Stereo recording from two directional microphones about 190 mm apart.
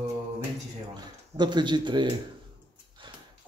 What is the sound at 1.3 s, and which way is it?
Speech, 25° right (ahead or behind).